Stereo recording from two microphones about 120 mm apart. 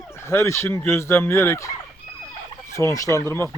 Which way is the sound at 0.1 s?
20° left (ahead or behind).